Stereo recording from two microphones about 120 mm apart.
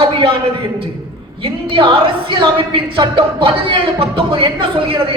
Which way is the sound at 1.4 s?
45° right (ahead or behind).